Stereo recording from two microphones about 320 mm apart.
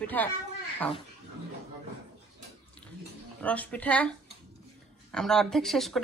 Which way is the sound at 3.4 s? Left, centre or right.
Centre.